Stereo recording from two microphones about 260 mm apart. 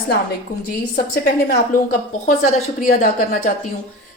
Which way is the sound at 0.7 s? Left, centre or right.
Left.